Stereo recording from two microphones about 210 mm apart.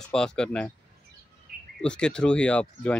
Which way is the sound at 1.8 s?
5° left (ahead or behind).